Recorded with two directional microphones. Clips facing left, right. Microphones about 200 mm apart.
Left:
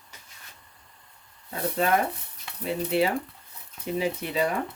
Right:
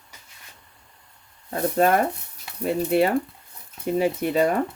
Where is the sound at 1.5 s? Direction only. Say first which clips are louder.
Right 5 dB; 50° right (ahead or behind).